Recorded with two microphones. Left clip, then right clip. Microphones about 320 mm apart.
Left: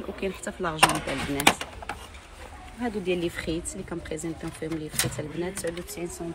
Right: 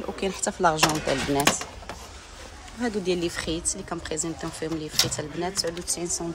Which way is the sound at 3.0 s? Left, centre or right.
Right.